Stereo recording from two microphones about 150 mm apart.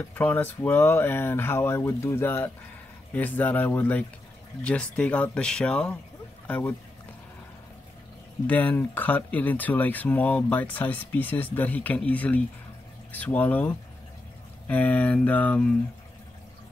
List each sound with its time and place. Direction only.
0.1 s speech: 10° left (ahead or behind)
8.5 s speech: 10° left (ahead or behind)